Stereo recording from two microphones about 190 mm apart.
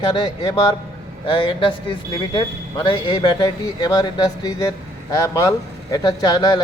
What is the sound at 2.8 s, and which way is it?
A man's voice, 25° left (ahead or behind).